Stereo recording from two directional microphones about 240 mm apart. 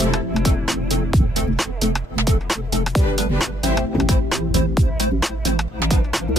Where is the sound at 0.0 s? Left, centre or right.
Centre.